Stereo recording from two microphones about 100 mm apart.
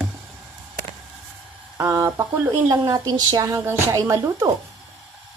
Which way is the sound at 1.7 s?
30° right (ahead or behind).